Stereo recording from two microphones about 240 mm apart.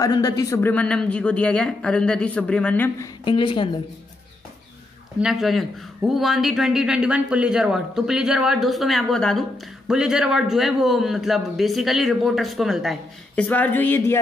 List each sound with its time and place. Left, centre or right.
0.0 s speech: centre
3.3 s a woman's voice: left
5.2 s a woman's voice: centre